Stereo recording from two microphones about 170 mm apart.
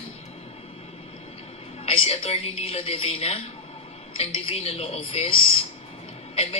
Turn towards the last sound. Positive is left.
turn(degrees=35)  # may be behind; listen again after turning